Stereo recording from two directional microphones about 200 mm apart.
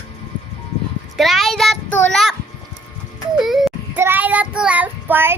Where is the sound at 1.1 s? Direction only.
Centre (ahead or behind).